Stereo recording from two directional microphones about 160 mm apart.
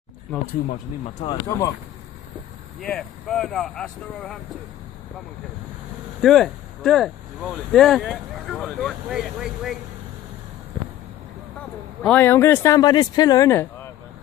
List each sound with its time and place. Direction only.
1.2 s speech: 25° left (ahead or behind)
2.8 s speech: 5° left (ahead or behind)
6.2 s speech: centre (ahead or behind)
12.0 s speech: 10° left (ahead or behind)